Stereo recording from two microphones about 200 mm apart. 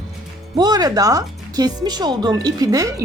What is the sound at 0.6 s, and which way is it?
A woman's voice, 20° right (ahead or behind).